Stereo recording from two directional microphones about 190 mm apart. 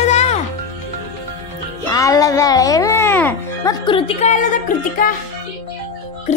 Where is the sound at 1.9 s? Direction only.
15° left (ahead or behind).